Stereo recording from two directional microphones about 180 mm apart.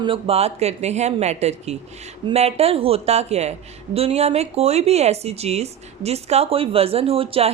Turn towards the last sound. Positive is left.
turn(degrees=-30)  # may be behind; listen again after turning